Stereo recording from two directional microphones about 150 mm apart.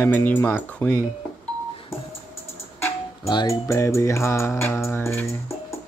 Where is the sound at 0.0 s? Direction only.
10° left (ahead or behind).